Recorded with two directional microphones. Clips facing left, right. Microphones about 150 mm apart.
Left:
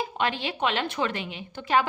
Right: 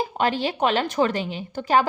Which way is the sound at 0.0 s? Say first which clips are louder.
Right 5 dB; 35° right (ahead or behind).